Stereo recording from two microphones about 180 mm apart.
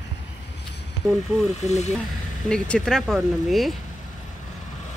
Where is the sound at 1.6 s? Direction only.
40° left (ahead or behind).